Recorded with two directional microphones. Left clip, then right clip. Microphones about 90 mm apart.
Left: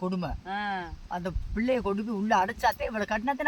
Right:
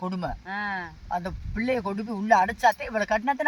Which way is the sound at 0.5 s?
30° left (ahead or behind).